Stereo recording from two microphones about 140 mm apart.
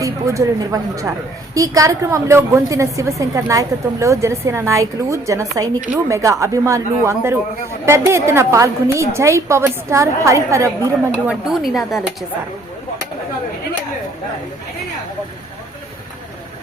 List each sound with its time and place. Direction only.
0.0 s a woman's voice: 25° right (ahead or behind)
11.3 s speech: 5° right (ahead or behind)